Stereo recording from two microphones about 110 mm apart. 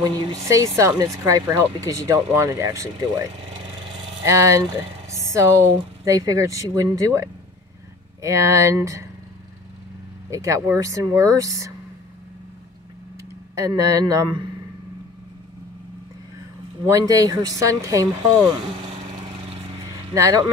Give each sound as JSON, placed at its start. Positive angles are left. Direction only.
{"t": 0.0, "sound": "speech", "side_deg": -35}
{"t": 6.0, "sound": "speech", "side_deg": -30}
{"t": 10.3, "sound": "speech", "side_deg": -25}
{"t": 13.6, "sound": "speech", "side_deg": -30}
{"t": 16.8, "sound": "speech", "side_deg": -30}
{"t": 20.2, "sound": "speech", "side_deg": -30}